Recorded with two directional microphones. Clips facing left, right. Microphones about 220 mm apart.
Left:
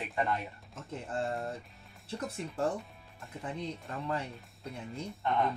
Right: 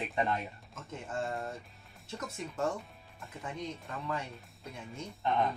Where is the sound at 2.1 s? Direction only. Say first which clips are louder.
Left 2 dB; 30° left (ahead or behind).